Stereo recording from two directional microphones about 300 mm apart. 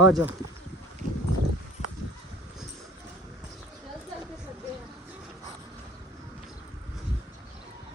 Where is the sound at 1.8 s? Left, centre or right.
Left.